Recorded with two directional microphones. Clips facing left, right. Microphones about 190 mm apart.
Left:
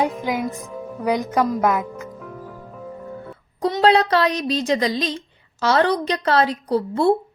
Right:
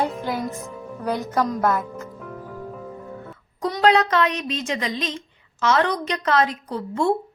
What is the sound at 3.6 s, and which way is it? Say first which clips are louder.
A woman's voice: left 2 dB; 30° left (ahead or behind).